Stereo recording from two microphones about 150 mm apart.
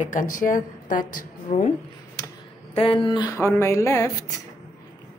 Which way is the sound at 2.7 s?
40° left (ahead or behind).